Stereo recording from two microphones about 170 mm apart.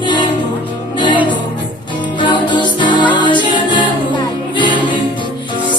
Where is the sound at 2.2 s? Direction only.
25° left (ahead or behind).